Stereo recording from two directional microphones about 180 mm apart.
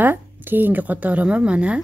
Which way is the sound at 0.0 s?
10° right (ahead or behind).